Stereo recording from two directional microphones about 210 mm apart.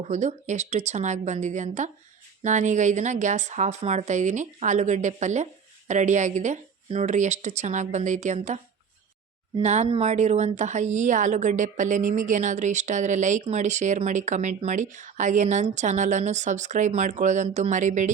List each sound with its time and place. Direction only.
0.0 s speech: 35° right (ahead or behind)